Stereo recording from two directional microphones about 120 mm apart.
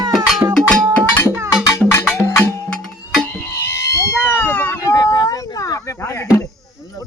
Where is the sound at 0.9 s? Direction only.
20° left (ahead or behind).